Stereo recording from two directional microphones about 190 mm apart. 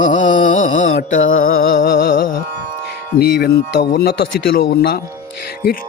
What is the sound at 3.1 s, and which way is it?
Speech, 55° left (ahead or behind).